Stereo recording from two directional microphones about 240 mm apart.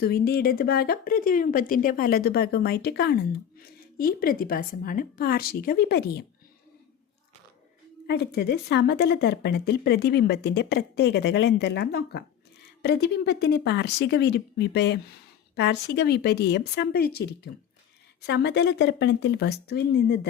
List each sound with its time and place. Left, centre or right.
0.0 s speech: left
8.0 s speech: left